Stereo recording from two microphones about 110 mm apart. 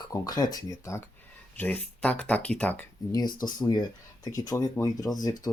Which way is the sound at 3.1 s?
40° left (ahead or behind).